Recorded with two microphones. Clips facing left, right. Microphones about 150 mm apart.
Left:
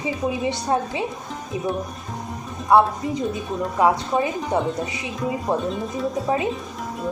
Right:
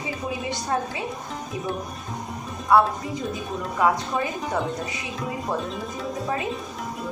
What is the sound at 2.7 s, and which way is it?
Speech, 20° left (ahead or behind).